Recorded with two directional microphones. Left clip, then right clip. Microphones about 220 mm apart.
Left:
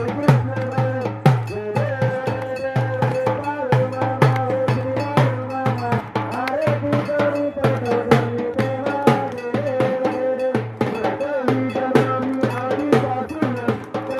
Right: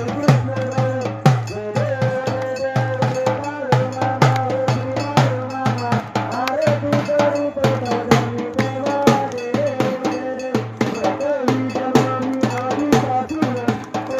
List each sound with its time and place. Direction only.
0.3 s music: 25° right (ahead or behind)
3.0 s music: 35° right (ahead or behind)
6.4 s music: 50° right (ahead or behind)